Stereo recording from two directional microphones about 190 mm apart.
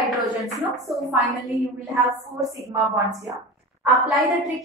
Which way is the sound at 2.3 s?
20° right (ahead or behind).